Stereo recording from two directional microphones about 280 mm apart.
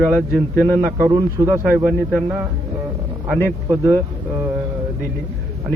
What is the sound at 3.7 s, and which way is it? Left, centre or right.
Speech, centre.